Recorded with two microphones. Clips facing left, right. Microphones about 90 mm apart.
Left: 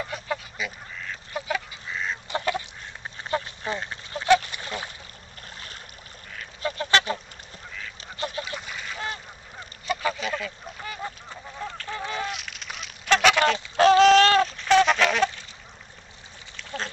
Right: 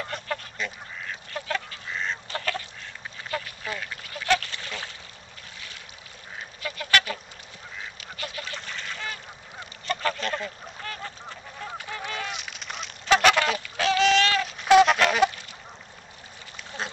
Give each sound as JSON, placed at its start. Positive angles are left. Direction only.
{"t": 0.0, "sound": "goose", "side_deg": 5}
{"t": 1.3, "sound": "duck", "side_deg": 15}
{"t": 2.2, "sound": "goose", "side_deg": 20}
{"t": 3.3, "sound": "duck", "side_deg": 25}
{"t": 6.6, "sound": "goose", "side_deg": 30}
{"t": 8.0, "sound": "duck", "side_deg": 30}
{"t": 8.5, "sound": "goose", "side_deg": 10}
{"t": 12.3, "sound": "honk", "side_deg": 0}
{"t": 13.7, "sound": "a sound", "side_deg": 40}
{"t": 14.6, "sound": "goose", "side_deg": -10}
{"t": 16.5, "sound": "duck", "side_deg": -10}